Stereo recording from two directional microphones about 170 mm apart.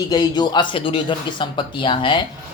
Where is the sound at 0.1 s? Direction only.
25° left (ahead or behind).